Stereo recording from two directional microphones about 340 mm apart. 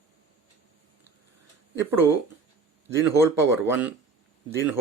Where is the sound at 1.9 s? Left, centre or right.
Centre.